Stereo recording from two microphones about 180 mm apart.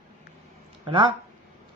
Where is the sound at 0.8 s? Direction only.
30° right (ahead or behind).